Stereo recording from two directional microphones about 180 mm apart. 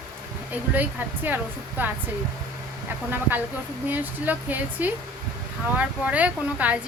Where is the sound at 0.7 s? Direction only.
10° right (ahead or behind).